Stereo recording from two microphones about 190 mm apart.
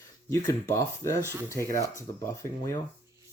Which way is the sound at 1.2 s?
15° right (ahead or behind).